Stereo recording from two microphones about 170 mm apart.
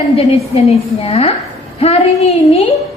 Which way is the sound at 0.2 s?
35° left (ahead or behind).